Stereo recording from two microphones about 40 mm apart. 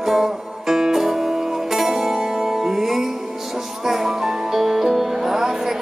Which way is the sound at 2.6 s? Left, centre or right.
Centre.